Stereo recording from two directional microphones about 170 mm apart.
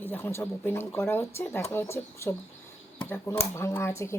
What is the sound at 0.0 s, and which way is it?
Speech, 10° left (ahead or behind).